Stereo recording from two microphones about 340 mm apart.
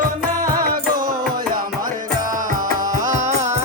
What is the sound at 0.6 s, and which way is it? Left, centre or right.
Music, right.